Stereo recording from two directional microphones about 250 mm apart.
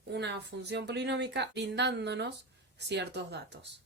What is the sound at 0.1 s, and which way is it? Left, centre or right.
Speech, right.